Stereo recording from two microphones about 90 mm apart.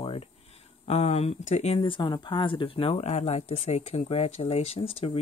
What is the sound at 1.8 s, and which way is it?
Speech, 65° left (ahead or behind).